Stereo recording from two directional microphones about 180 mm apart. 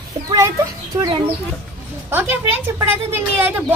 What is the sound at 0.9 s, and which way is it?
A woman's voice, 20° right (ahead or behind).